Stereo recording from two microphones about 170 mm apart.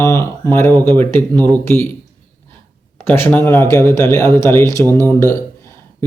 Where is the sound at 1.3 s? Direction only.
25° right (ahead or behind).